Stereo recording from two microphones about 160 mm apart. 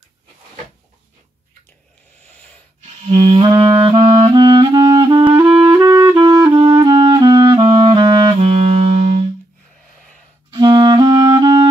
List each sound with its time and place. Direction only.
2.8 s clarinet: 45° right (ahead or behind); by 5.3 s 25° right (ahead or behind)
5.3 s clarinet: 15° right (ahead or behind)
5.7 s music: 15° right (ahead or behind)
6.1 s clarinet: 20° right (ahead or behind)
8.4 s music: 40° right (ahead or behind)
10.5 s clarinet: 25° right (ahead or behind)